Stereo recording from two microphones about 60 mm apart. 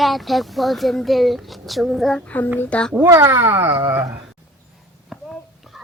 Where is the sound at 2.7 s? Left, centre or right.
Centre.